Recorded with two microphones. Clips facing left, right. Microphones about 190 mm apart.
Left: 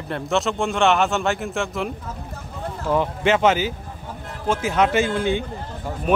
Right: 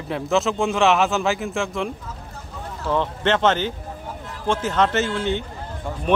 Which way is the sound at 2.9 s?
10° left (ahead or behind).